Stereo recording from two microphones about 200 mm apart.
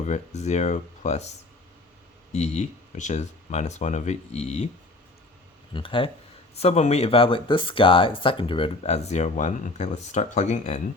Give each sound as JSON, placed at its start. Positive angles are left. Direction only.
{"t": 0.0, "sound": "speech", "side_deg": 35}
{"t": 2.3, "sound": "speech", "side_deg": 35}
{"t": 5.7, "sound": "speech", "side_deg": 25}